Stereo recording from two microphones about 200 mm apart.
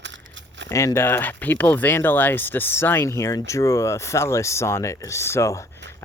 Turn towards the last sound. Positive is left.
turn(degrees=15)  # may be behind; listen again after turning